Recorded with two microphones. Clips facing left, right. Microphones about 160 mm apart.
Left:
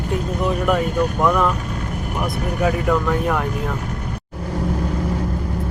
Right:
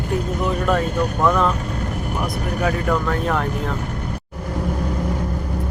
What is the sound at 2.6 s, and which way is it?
Speech, 15° left (ahead or behind).